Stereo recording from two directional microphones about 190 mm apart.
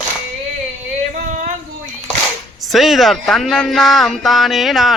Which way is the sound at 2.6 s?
Centre (ahead or behind).